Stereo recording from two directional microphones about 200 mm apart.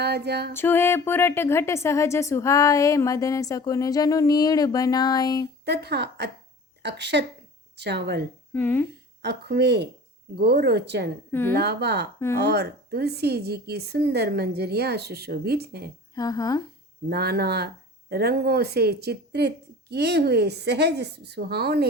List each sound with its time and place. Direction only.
0.0 s speech: 55° right (ahead or behind)
0.5 s speech: 10° left (ahead or behind)
5.6 s speech: 55° right (ahead or behind)
8.5 s speech: 10° left (ahead or behind)
9.2 s speech: 55° right (ahead or behind)
11.3 s a woman's voice: 10° left (ahead or behind)
11.5 s speech: 55° right (ahead or behind)
16.1 s speech: 20° left (ahead or behind)
17.1 s speech: 50° right (ahead or behind)